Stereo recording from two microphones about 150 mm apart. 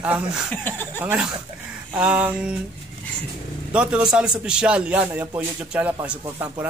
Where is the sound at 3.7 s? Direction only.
5° right (ahead or behind).